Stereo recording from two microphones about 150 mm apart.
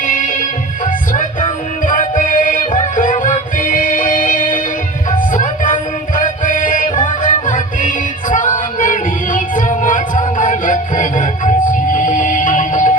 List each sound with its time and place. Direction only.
0.0 s music: 65° left (ahead or behind)